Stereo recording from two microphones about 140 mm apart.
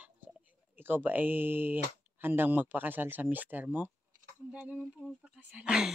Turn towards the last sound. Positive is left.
turn(degrees=-5)  # may be behind; listen again after turning